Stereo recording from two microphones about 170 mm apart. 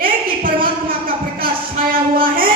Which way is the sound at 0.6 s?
55° right (ahead or behind).